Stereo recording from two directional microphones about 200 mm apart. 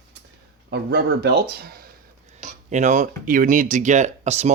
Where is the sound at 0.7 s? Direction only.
50° right (ahead or behind).